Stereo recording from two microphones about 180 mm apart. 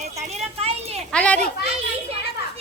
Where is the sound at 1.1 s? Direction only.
5° left (ahead or behind).